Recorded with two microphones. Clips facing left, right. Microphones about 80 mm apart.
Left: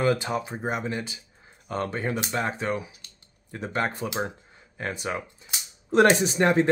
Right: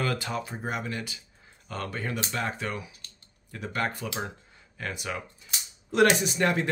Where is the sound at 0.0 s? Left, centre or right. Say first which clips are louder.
Left 6 dB; left.